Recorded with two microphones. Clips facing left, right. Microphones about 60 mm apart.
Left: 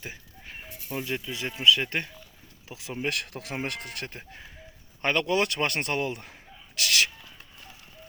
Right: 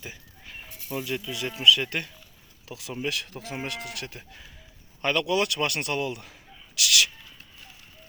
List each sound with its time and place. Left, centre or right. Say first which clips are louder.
0.0 s a sound: left 1 dB; left
1.0 s a man's voice: even; left
3.0 s a man's voice: left 1 dB; left